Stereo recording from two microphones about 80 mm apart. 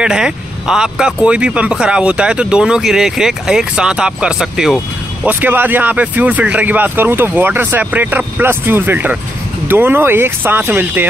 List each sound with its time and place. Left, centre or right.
0.0 s speech: centre
5.2 s speech: right